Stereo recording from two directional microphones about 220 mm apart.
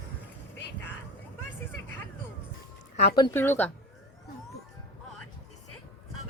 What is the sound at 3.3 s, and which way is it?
Speech, 10° left (ahead or behind).